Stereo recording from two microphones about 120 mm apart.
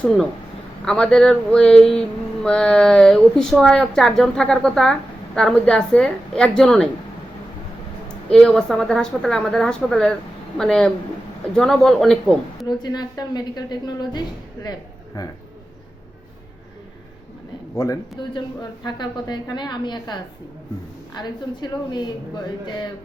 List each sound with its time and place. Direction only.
0.0 s speech: 10° left (ahead or behind)
0.9 s a sound: 5° left (ahead or behind)
8.0 s a sound: 5° left (ahead or behind)
12.6 s a woman's voice: 35° left (ahead or behind)
17.7 s speech: 30° left (ahead or behind)
18.2 s a woman's voice: 40° left (ahead or behind)
21.2 s a woman's voice: 40° left (ahead or behind)